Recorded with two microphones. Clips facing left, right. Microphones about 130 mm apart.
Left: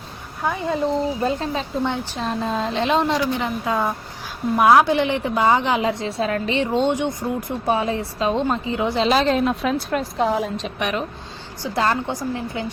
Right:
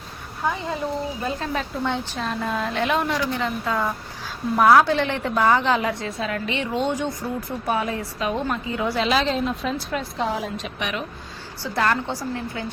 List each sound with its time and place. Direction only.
1.2 s a woman's voice: 25° left (ahead or behind)
9.0 s a woman's voice: 40° left (ahead or behind)
9.3 s a woman's voice: 70° left (ahead or behind); by 11.0 s 40° left (ahead or behind)
11.6 s a woman's voice: 20° left (ahead or behind)